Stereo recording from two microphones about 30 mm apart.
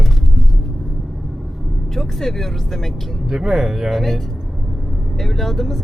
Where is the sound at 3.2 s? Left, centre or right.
Centre.